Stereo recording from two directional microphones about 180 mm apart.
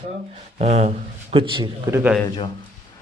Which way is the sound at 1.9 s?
10° right (ahead or behind).